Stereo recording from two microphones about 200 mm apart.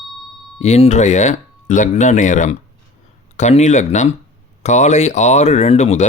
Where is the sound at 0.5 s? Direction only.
35° left (ahead or behind).